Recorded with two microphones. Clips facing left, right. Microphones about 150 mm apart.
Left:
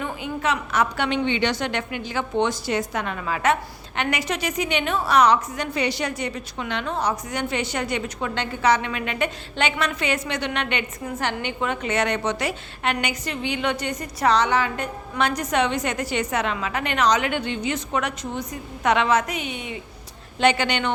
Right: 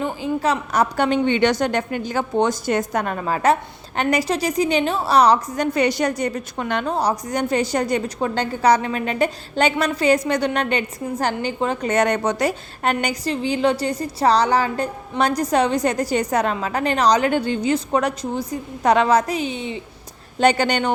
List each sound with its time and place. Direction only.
0.0 s a woman's voice: 30° right (ahead or behind)
20.4 s a woman's voice: 40° right (ahead or behind)